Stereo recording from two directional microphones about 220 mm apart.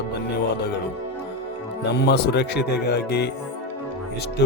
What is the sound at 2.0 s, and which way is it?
Speech, 50° left (ahead or behind).